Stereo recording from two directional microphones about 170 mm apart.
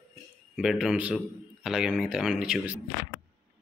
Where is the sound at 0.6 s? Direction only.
5° right (ahead or behind).